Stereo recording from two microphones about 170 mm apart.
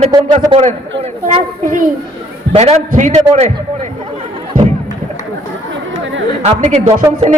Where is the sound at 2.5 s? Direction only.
40° right (ahead or behind).